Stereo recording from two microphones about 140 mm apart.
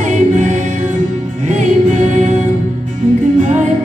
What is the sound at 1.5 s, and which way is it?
Music, 60° right (ahead or behind).